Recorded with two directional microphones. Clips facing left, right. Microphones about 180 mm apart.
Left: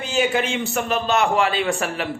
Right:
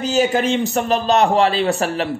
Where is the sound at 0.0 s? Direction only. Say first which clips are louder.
Right 4 dB; 40° right (ahead or behind).